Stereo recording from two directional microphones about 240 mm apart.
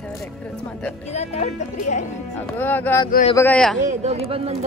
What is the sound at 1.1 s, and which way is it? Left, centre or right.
Speech, left.